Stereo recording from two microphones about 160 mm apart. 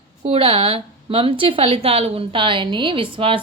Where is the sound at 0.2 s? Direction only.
35° right (ahead or behind).